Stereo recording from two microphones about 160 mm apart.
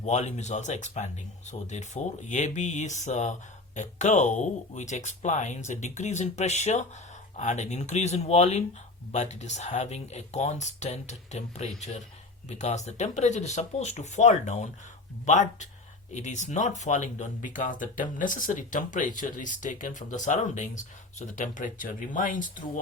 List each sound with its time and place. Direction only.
0.0 s speech: 45° left (ahead or behind)